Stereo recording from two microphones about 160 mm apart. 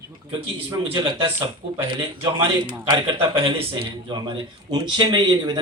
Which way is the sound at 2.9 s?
35° right (ahead or behind).